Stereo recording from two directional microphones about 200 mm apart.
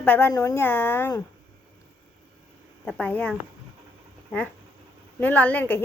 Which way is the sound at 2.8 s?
5° left (ahead or behind).